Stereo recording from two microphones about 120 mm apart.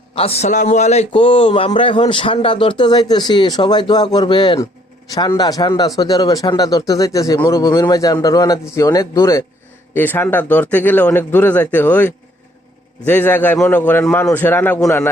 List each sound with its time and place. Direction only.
0.1 s a man's voice: 55° left (ahead or behind)
0.4 s a man's voice: 85° left; by 1.0 s 70° left (ahead or behind)
1.1 s a man's voice: 45° left (ahead or behind); by 9.4 s 25° left (ahead or behind)
9.9 s a man's voice: 15° left (ahead or behind)